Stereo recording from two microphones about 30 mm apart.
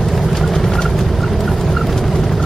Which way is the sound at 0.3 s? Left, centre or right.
Centre.